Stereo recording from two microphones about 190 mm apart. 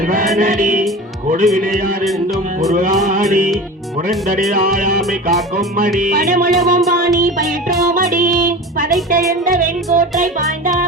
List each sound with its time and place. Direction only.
0.3 s music: 40° right (ahead or behind)
4.5 s music: 45° right (ahead or behind)
7.9 s child singing: 45° right (ahead or behind)
9.6 s music: 45° right (ahead or behind)